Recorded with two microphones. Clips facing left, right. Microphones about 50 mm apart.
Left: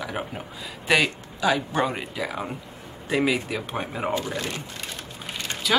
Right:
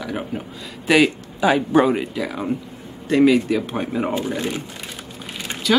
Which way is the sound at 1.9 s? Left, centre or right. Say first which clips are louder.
Right 8 dB; centre.